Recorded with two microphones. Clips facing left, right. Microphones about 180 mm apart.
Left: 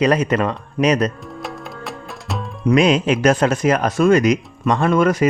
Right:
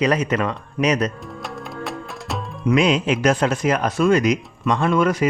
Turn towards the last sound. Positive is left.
turn(degrees=45)  # may be behind; listen again after turning